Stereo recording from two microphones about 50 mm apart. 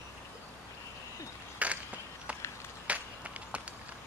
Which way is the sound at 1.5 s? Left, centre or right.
Right.